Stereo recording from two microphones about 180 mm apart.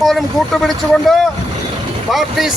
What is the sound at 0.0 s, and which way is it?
Speech, centre (ahead or behind).